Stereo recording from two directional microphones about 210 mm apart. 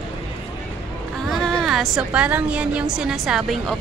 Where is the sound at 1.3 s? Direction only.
Centre (ahead or behind).